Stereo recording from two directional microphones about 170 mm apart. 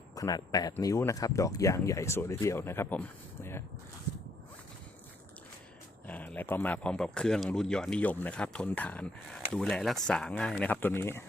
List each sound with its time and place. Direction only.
0.2 s speech: 20° left (ahead or behind)
6.1 s speech: 10° left (ahead or behind)